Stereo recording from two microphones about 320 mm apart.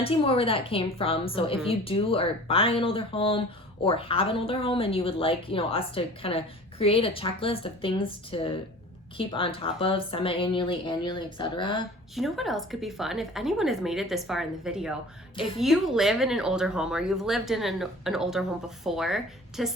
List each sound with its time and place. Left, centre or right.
0.0 s speech: centre
12.1 s speech: centre